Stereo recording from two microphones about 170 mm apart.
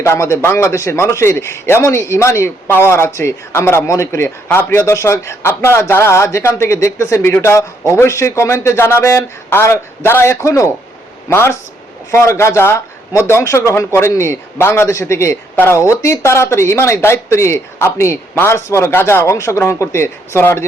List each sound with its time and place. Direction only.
0.0 s a man's voice: 15° left (ahead or behind)